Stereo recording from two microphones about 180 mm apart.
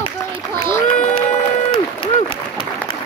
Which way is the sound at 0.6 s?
40° left (ahead or behind).